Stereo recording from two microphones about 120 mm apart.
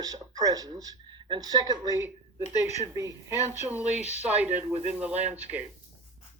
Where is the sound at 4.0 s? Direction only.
65° left (ahead or behind).